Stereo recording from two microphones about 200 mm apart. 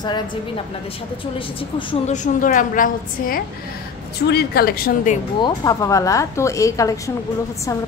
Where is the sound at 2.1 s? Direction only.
40° left (ahead or behind).